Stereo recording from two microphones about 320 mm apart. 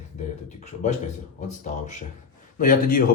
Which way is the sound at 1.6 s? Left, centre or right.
Left.